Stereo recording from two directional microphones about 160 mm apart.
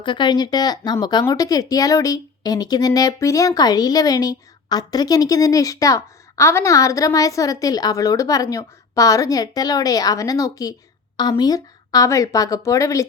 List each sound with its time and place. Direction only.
0.0 s speech: 30° left (ahead or behind)